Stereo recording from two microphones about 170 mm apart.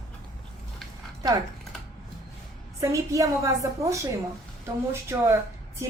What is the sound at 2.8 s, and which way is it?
A woman's voice, 20° right (ahead or behind).